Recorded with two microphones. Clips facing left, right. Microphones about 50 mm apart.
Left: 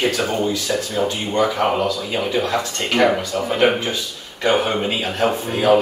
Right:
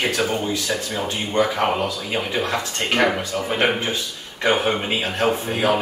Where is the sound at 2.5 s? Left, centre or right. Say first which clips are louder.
Left 2 dB; right.